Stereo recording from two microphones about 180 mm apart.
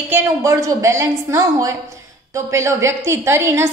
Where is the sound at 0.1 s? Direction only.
15° right (ahead or behind).